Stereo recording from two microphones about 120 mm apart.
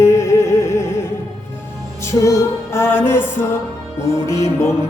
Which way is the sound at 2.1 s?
25° left (ahead or behind).